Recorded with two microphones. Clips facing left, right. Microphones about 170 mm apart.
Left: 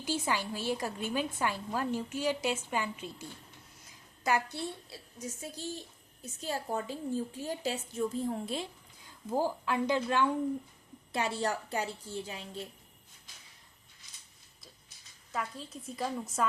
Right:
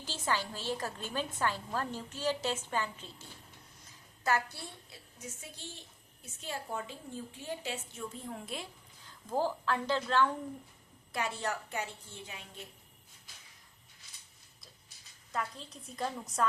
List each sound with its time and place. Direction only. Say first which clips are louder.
0.0 s a woman's voice: left 3 dB; 10° left (ahead or behind)
5.4 s a woman's voice: left 9 dB; 40° left (ahead or behind)
9.3 s a woman's voice: left 1 dB; 15° left (ahead or behind)
11.1 s a woman's voice: left 4 dB; 30° left (ahead or behind)
15.3 s a woman's voice: left 1 dB; 5° left (ahead or behind)